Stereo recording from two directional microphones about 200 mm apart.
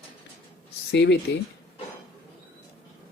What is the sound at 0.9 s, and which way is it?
Speech, 60° left (ahead or behind).